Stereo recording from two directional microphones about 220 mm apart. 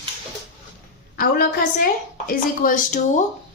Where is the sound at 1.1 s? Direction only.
40° left (ahead or behind).